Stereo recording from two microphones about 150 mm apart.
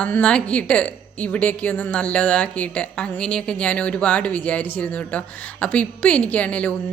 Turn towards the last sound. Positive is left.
turn(degrees=10)  # may be behind; listen again after turning